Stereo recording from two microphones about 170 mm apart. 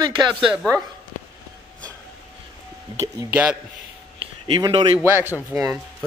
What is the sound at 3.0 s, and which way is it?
Speech, 15° right (ahead or behind).